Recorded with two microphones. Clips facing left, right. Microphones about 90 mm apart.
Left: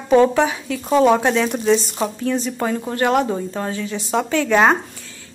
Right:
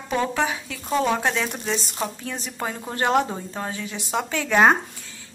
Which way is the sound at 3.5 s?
10° right (ahead or behind).